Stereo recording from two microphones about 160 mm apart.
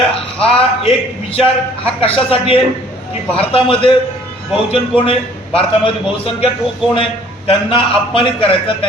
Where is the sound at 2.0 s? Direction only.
35° left (ahead or behind).